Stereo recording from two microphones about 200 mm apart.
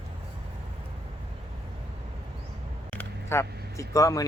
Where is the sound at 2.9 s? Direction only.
10° left (ahead or behind).